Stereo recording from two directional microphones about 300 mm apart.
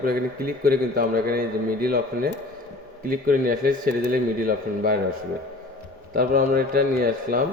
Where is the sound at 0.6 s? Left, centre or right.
Right.